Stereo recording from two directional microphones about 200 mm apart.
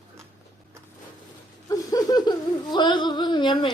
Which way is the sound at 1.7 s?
15° left (ahead or behind).